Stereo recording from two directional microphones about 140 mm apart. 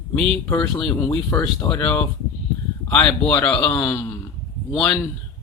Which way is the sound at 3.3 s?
10° left (ahead or behind).